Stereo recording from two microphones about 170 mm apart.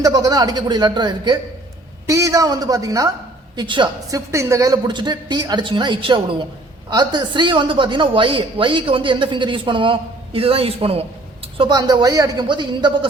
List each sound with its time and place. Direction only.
0.0 s a woman's voice: 20° right (ahead or behind)